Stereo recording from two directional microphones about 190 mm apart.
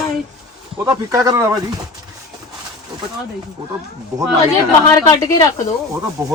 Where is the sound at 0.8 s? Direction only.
15° right (ahead or behind).